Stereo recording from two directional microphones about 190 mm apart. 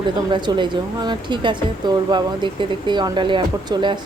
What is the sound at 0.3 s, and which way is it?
Speech, 25° right (ahead or behind).